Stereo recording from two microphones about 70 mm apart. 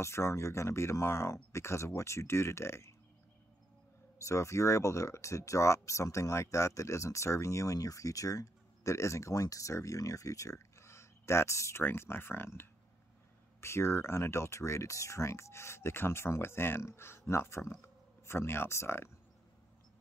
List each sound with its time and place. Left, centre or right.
0.0 s speech: left
4.2 s speech: left